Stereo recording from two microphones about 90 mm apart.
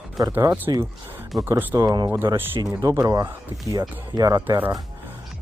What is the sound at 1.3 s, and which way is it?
Speech, centre (ahead or behind).